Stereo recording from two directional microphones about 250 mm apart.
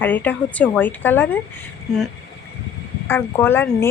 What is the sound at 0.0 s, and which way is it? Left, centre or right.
Speech, centre.